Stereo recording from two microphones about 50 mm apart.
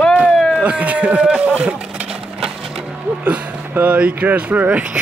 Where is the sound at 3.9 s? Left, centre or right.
Right.